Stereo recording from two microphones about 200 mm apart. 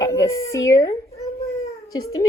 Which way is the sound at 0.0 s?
15° left (ahead or behind).